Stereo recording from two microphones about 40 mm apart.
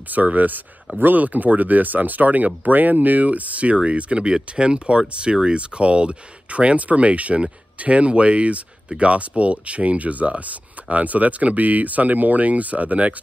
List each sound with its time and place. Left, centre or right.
0.1 s speech: right